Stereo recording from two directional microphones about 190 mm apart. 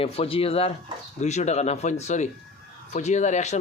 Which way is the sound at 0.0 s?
30° left (ahead or behind).